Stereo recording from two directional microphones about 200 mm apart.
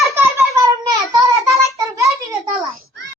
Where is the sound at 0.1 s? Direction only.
15° right (ahead or behind).